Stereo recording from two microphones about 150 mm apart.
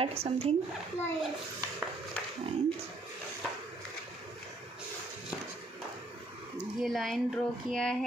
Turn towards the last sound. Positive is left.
turn(degrees=5)  # may be behind; listen again after turning